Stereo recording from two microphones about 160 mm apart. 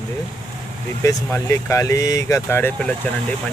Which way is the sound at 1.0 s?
20° left (ahead or behind).